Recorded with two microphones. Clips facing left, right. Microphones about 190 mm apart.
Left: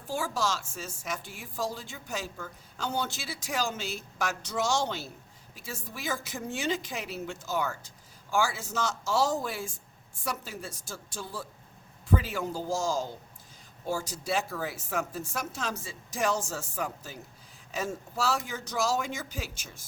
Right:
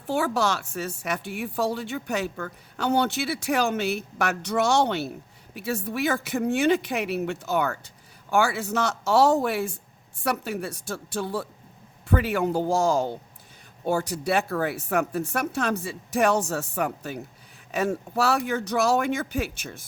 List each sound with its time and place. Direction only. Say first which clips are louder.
0.1 s speech: right 7 dB; 65° right (ahead or behind)